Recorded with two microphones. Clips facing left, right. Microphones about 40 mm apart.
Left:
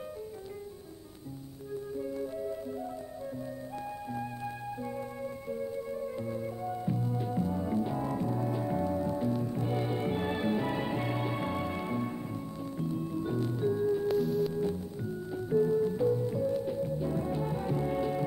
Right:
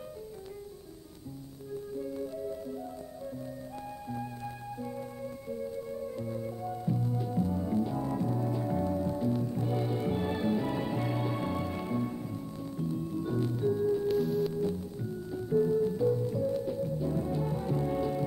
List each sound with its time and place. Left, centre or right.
2.0 s music: centre
5.5 s music: centre
14.0 s music: centre
14.5 s music: centre